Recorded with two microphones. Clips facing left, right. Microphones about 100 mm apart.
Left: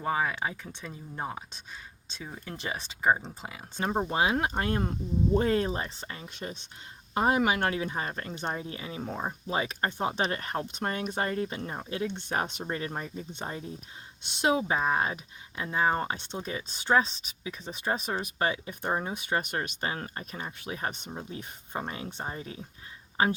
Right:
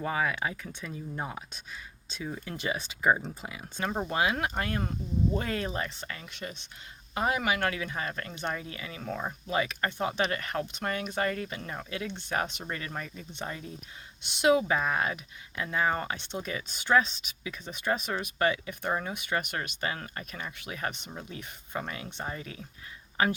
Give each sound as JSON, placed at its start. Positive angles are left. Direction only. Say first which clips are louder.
{"t": 0.0, "sound": "speech", "louder": "left 1 dB", "side_deg": 30}
{"t": 2.1, "sound": "speech", "louder": "right 4 dB", "side_deg": 30}
{"t": 7.1, "sound": "speech", "louder": "left 3 dB", "side_deg": 40}